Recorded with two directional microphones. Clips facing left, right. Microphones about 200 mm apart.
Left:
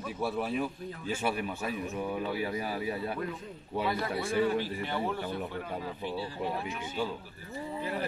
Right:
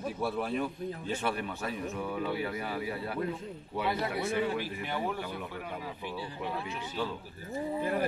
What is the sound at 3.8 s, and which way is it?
A man's voice, 20° right (ahead or behind).